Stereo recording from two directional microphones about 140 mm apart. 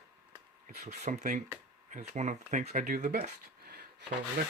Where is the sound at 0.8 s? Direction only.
55° right (ahead or behind).